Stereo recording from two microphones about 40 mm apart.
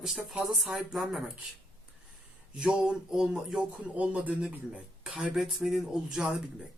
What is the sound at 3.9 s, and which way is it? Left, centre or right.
Speech, right.